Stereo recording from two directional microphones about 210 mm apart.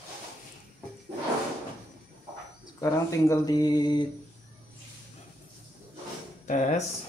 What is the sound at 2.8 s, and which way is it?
Speech, 15° left (ahead or behind).